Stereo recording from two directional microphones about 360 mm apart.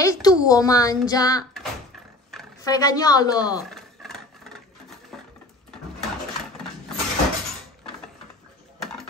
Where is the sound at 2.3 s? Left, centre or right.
Centre.